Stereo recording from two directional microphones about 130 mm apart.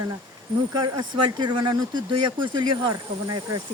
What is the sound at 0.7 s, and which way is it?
Speech, 35° right (ahead or behind).